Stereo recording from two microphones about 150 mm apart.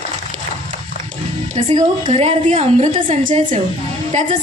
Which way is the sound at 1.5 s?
55° right (ahead or behind).